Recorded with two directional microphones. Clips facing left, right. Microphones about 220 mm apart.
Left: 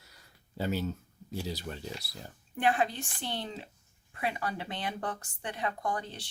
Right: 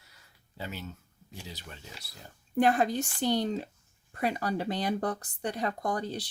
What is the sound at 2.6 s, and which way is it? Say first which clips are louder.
Speech: right 4 dB; 40° right (ahead or behind).